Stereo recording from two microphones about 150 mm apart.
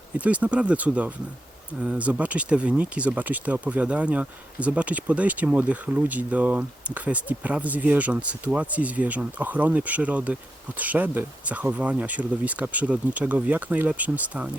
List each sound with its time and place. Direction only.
0.2 s speech: 10° right (ahead or behind)